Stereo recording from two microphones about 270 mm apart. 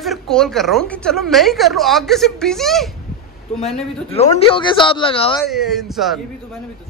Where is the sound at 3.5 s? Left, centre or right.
Left.